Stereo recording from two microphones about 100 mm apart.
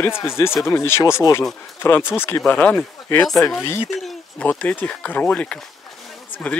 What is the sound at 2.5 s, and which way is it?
Speech, 15° left (ahead or behind).